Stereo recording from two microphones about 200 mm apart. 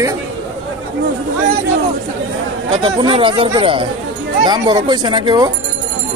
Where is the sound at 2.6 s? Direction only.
25° right (ahead or behind).